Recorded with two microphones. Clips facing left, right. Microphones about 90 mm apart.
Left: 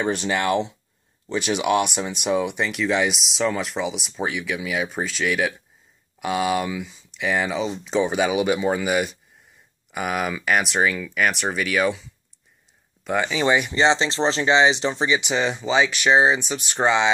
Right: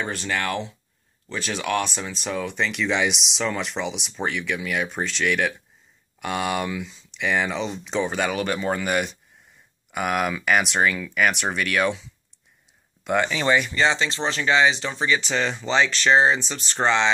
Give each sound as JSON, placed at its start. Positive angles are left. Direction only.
{"t": 0.0, "sound": "speech", "side_deg": 20}
{"t": 13.7, "sound": "speech", "side_deg": 25}
{"t": 15.1, "sound": "speech", "side_deg": 10}